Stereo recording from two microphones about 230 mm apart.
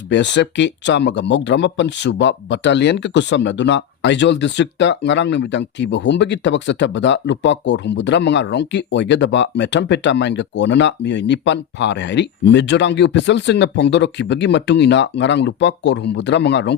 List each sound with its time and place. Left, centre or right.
0.1 s speech: left